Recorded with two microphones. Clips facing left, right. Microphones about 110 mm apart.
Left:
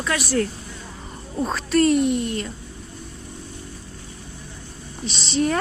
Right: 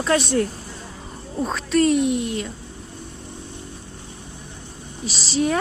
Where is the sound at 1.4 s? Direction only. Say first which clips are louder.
Even; centre (ahead or behind).